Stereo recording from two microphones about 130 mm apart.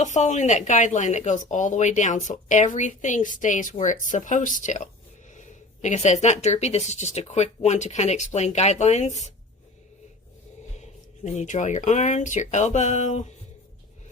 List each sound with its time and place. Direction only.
0.0 s speech: 65° left (ahead or behind)
10.8 s speech: 60° left (ahead or behind)